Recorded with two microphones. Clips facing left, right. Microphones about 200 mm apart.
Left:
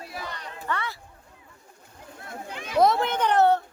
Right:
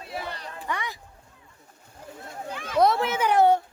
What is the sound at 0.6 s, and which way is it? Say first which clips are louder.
Speech: left 1 dB; 15° right (ahead or behind).